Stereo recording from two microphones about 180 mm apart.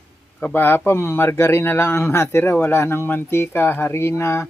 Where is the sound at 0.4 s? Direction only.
10° left (ahead or behind).